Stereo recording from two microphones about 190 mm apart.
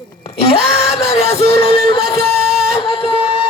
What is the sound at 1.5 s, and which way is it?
Music, 55° right (ahead or behind).